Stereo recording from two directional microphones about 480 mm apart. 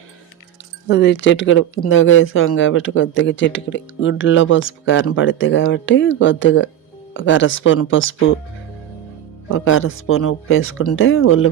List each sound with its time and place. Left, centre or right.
0.9 s speech: left
9.5 s speech: left